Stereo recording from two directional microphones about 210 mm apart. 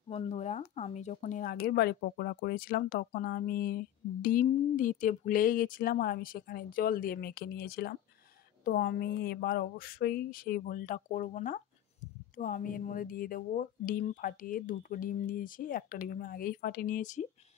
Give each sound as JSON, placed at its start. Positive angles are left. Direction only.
{"t": 0.1, "sound": "speech", "side_deg": 30}